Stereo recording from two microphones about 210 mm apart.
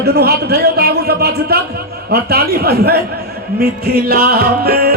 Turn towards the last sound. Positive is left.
turn(degrees=-45)  # may be behind; listen again after turning